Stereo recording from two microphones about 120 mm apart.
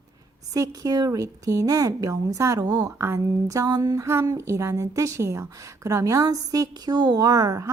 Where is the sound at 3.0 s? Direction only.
25° right (ahead or behind).